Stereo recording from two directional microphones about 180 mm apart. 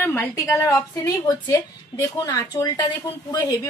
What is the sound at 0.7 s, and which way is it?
Speech, 20° left (ahead or behind).